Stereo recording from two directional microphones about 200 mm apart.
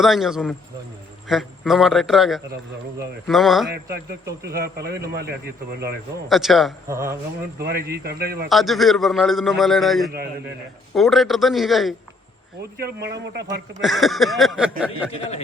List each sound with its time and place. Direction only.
0.0 s a man's voice: centre (ahead or behind)
4.4 s a man's voice: 50° right (ahead or behind)
6.2 s a man's voice: centre (ahead or behind)
6.8 s speech: 15° right (ahead or behind)
7.6 s a man's voice: 55° right (ahead or behind)
8.4 s a man's voice: centre (ahead or behind)
12.7 s a man's voice: 55° right (ahead or behind)
13.8 s a man's voice: centre (ahead or behind)
15.1 s speech: 30° left (ahead or behind)